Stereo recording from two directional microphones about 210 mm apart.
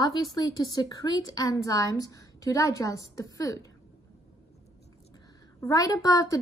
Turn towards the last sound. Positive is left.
turn(degrees=15)  # may be behind; listen again after turning